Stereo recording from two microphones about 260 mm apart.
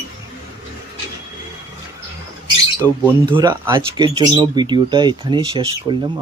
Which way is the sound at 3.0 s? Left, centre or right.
Centre.